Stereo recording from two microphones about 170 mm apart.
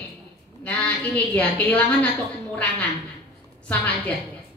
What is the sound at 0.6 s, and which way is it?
A woman's voice, 10° left (ahead or behind).